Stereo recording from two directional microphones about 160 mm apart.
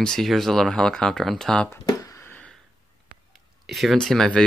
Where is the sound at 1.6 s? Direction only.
20° left (ahead or behind).